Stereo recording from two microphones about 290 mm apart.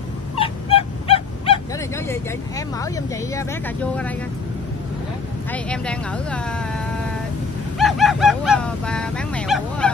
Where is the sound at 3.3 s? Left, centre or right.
Centre.